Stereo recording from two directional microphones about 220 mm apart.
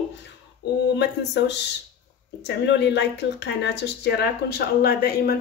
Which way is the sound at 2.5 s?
50° left (ahead or behind).